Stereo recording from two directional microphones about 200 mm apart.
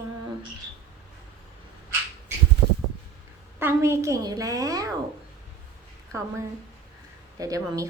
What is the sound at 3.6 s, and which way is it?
A woman's voice, 10° right (ahead or behind).